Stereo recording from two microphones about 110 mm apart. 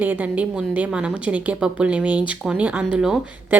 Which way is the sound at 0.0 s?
15° right (ahead or behind).